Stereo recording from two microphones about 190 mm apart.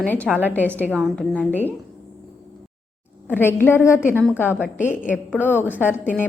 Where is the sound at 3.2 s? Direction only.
10° left (ahead or behind).